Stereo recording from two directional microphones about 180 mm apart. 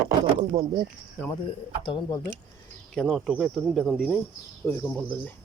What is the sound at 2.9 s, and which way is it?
Speech, centre (ahead or behind).